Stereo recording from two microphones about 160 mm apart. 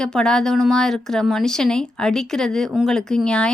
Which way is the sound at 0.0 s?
5° left (ahead or behind).